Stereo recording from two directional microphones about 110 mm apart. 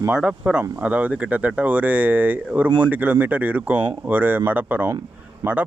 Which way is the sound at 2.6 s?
45° right (ahead or behind).